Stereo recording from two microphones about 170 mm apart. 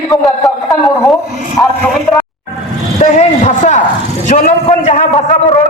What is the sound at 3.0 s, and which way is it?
A man's voice, 40° left (ahead or behind).